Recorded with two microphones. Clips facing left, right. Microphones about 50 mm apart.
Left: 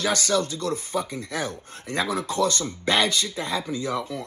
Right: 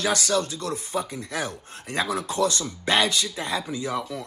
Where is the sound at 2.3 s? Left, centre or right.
Left.